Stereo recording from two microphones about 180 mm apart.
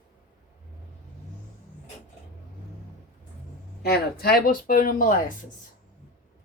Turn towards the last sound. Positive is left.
turn(degrees=50)  # may be behind; listen again after turning